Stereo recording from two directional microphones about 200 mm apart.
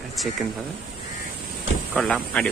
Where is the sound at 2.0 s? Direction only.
5° left (ahead or behind).